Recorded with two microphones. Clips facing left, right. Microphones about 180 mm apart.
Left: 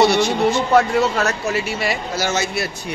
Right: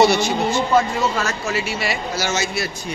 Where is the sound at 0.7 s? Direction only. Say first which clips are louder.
Left 3 dB; 65° left (ahead or behind).